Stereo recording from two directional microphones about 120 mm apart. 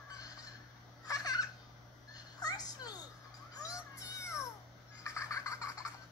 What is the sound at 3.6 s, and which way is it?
Music, 25° left (ahead or behind).